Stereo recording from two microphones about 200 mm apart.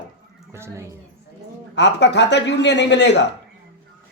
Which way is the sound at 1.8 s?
60° left (ahead or behind).